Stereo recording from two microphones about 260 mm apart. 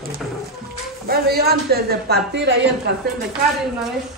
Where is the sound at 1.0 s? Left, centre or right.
Right.